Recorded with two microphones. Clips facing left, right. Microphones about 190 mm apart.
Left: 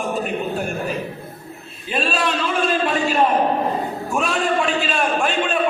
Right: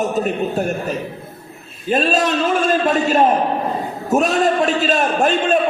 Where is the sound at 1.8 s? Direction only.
45° right (ahead or behind).